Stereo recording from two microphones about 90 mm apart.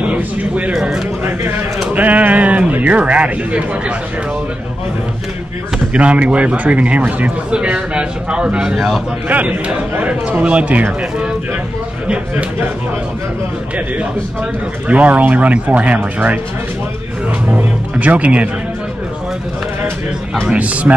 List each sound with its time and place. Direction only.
0.0 s speech: 15° right (ahead or behind)
0.7 s speech: 5° right (ahead or behind)
2.0 s speech: 20° right (ahead or behind)
5.9 s speech: 15° right (ahead or behind)
9.3 s speech: 15° right (ahead or behind)
14.9 s speech: 15° right (ahead or behind)
17.5 s speech: 15° right (ahead or behind)
20.4 s speech: 15° right (ahead or behind)